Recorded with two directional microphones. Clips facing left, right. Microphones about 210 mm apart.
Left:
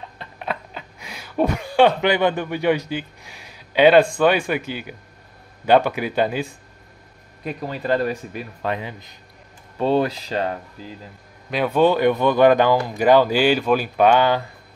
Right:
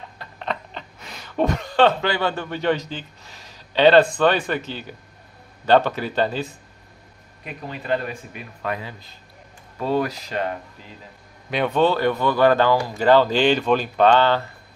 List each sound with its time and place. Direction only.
0.4 s speech: 10° left (ahead or behind)
7.4 s speech: 35° left (ahead or behind)
8.6 s speech: 20° left (ahead or behind)
11.5 s a man's voice: 5° left (ahead or behind)
11.8 s speech: 15° left (ahead or behind)